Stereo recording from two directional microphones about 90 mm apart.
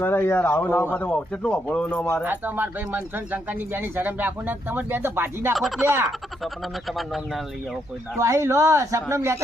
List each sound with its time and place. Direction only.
0.0 s speech: 25° left (ahead or behind)
2.2 s speech: 20° right (ahead or behind)
5.5 s speech: centre (ahead or behind)
5.8 s speech: 30° right (ahead or behind)
6.1 s speech: centre (ahead or behind)
8.2 s speech: 35° right (ahead or behind)